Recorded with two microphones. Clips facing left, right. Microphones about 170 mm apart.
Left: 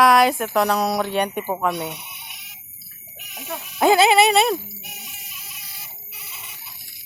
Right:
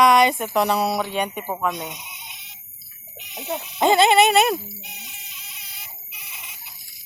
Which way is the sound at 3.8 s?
5° left (ahead or behind).